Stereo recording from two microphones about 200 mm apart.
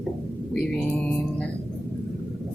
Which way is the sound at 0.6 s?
5° left (ahead or behind).